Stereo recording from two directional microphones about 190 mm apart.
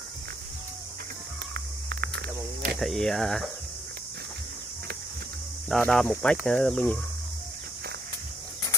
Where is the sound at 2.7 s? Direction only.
Centre (ahead or behind).